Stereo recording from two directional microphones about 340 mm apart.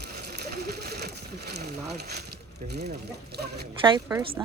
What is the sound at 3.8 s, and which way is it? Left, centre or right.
Speech, centre.